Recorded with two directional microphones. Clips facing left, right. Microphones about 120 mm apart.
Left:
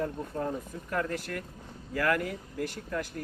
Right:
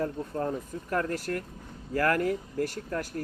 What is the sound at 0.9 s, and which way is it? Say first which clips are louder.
Speech: right 3 dB; 40° right (ahead or behind).